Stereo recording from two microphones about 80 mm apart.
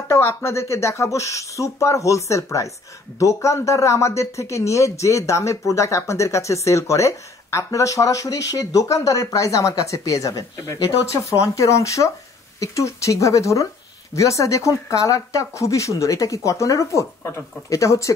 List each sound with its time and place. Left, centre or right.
0.1 s speech: left